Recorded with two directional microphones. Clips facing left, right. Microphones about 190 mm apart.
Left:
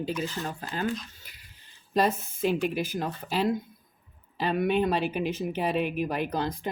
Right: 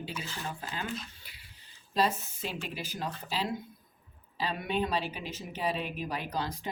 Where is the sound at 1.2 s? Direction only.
45° left (ahead or behind).